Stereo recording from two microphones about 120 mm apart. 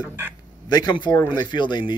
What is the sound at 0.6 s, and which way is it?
Speech, 35° left (ahead or behind).